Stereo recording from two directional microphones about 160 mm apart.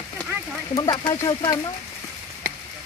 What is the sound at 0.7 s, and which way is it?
Speech, 25° left (ahead or behind).